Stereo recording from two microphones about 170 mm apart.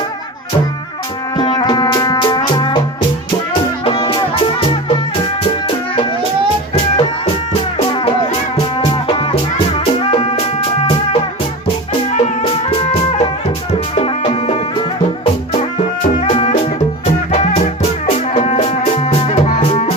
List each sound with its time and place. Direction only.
1.4 s music: 25° left (ahead or behind)
3.8 s music: 30° left (ahead or behind)
7.9 s music: 30° left (ahead or behind)
12.1 s music: 40° left (ahead or behind)
16.3 s music: 30° left (ahead or behind)